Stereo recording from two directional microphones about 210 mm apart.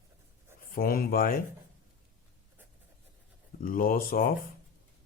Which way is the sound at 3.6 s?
40° left (ahead or behind).